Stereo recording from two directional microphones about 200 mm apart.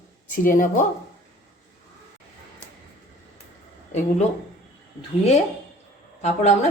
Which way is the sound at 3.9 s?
35° left (ahead or behind).